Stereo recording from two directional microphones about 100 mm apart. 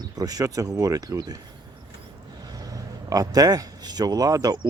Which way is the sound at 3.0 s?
40° right (ahead or behind).